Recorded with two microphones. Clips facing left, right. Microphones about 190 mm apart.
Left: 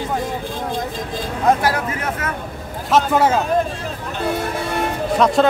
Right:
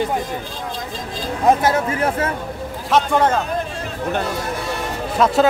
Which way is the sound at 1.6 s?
25° right (ahead or behind).